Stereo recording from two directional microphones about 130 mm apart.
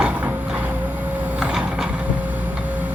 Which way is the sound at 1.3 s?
5° right (ahead or behind).